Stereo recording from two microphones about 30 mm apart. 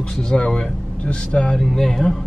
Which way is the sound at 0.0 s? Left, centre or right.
Left.